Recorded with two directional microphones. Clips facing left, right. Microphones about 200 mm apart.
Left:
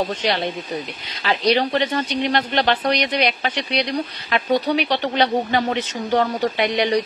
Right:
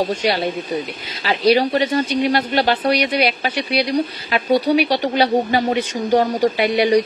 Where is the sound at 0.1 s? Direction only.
10° right (ahead or behind).